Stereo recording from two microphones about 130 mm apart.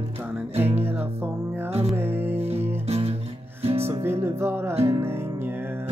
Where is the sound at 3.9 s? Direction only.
20° right (ahead or behind).